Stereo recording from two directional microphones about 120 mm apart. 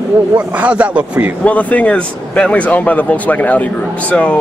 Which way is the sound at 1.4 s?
10° left (ahead or behind).